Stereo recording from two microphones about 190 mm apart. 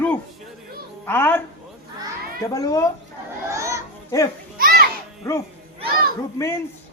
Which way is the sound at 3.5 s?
15° right (ahead or behind).